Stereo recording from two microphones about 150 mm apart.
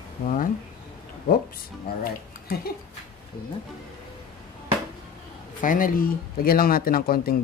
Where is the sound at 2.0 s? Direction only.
90° left.